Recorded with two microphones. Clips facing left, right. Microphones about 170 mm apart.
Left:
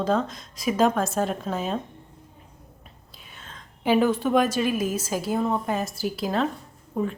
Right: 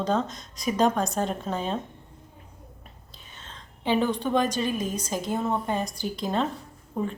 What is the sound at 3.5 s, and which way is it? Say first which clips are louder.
A woman's voice: left 3 dB; 10° left (ahead or behind).